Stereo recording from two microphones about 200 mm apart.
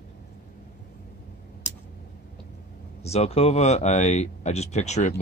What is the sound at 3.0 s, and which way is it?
Speech, 30° left (ahead or behind).